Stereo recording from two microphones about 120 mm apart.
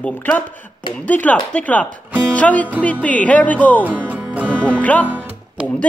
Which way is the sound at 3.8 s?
15° right (ahead or behind).